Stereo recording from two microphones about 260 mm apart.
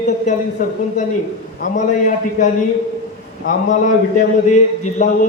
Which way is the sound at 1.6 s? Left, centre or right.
Left.